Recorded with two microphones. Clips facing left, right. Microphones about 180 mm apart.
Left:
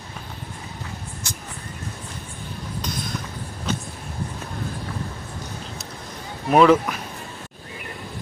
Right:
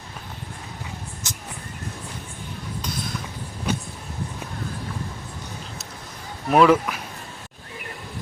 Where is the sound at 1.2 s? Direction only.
20° right (ahead or behind).